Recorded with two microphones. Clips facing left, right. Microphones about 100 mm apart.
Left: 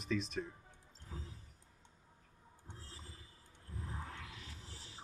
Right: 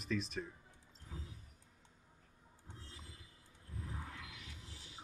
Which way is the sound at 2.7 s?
35° left (ahead or behind).